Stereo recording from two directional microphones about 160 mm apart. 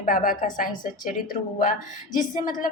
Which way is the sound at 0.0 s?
60° left (ahead or behind).